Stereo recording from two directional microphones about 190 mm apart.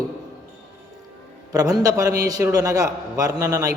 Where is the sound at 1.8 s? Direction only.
15° right (ahead or behind).